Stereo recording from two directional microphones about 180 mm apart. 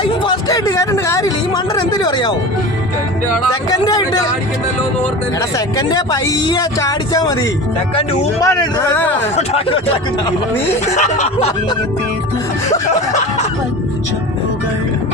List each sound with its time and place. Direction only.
0.0 s a sound: 25° left (ahead or behind)
3.7 s speech: 20° left (ahead or behind)
5.5 s speech: 20° left (ahead or behind)
8.4 s a man's voice: 20° left (ahead or behind)
9.3 s snicker: 35° left (ahead or behind)
10.8 s snicker: 40° left (ahead or behind)